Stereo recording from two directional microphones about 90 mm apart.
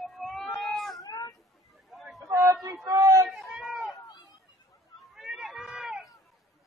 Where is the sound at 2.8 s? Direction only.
40° right (ahead or behind).